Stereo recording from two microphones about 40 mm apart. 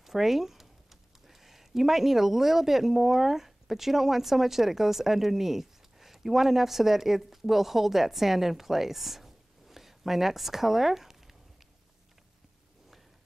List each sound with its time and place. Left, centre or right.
0.0 s speech: centre